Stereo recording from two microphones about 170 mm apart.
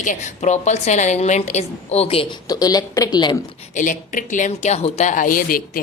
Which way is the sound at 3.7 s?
50° left (ahead or behind).